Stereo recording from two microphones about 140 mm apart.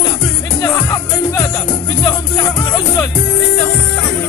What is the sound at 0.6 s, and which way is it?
Music, 25° left (ahead or behind).